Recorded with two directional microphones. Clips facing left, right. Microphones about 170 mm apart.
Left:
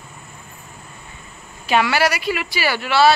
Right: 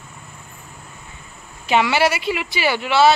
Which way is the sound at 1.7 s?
20° right (ahead or behind).